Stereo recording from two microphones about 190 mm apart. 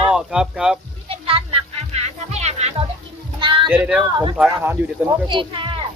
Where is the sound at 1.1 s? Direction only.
30° right (ahead or behind).